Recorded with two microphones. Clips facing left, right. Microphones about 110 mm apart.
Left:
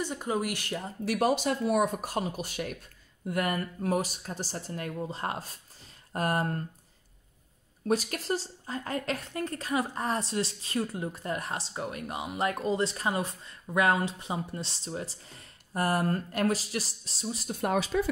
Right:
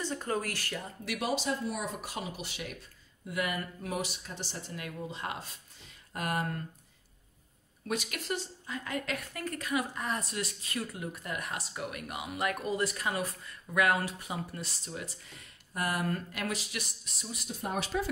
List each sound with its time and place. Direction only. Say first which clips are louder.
0.0 s speech: left 3 dB; 15° left (ahead or behind)
1.0 s a woman's voice: left 6 dB; 45° left (ahead or behind)
7.9 s a woman's voice: left 6 dB; 35° left (ahead or behind)